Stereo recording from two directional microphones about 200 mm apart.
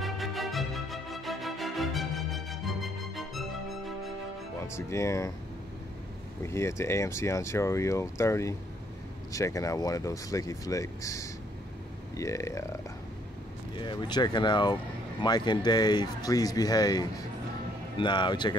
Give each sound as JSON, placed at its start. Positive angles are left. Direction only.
{"t": 0.0, "sound": "music", "side_deg": 0}
{"t": 4.7, "sound": "speech", "side_deg": 15}
{"t": 6.4, "sound": "speech", "side_deg": 15}
{"t": 13.7, "sound": "speech", "side_deg": 20}